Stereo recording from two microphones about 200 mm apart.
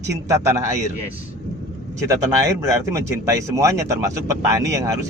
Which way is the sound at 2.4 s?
15° right (ahead or behind).